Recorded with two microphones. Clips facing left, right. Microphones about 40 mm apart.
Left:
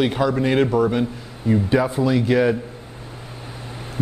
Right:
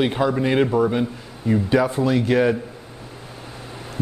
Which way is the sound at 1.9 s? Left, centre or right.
Right.